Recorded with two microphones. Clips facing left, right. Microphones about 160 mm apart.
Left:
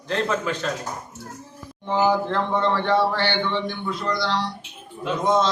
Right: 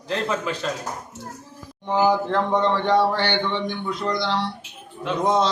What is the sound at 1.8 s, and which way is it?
A man's voice, 10° right (ahead or behind).